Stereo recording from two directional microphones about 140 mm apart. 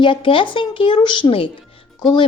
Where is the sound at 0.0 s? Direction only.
35° left (ahead or behind).